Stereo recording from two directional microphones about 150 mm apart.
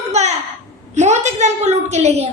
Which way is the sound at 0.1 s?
50° right (ahead or behind).